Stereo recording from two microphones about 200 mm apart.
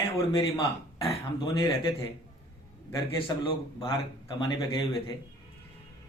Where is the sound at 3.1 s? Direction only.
25° left (ahead or behind).